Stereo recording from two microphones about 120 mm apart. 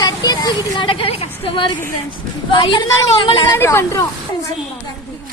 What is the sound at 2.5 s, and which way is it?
Speech, 40° left (ahead or behind).